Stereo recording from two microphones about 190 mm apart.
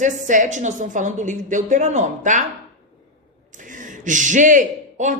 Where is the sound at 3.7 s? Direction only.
45° right (ahead or behind).